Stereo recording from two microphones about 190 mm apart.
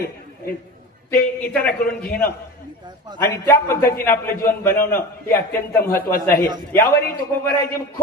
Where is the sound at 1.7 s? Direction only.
50° left (ahead or behind).